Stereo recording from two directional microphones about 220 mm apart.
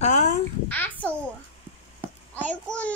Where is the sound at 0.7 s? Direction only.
10° left (ahead or behind).